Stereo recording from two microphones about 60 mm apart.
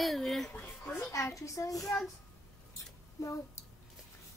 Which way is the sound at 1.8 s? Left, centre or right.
Centre.